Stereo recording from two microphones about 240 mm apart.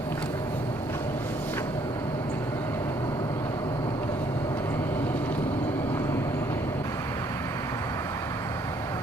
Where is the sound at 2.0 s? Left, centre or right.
Centre.